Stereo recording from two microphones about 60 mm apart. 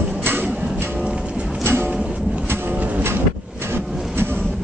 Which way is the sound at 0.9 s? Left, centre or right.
Centre.